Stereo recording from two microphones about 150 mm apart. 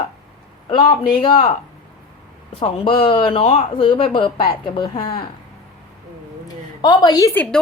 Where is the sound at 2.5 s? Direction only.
40° left (ahead or behind).